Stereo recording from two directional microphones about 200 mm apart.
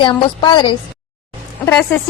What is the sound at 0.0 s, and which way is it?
Speech, 25° left (ahead or behind).